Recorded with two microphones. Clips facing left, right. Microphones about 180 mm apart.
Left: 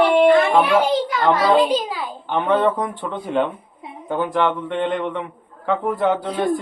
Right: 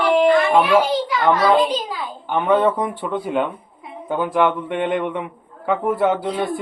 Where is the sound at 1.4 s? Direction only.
10° left (ahead or behind).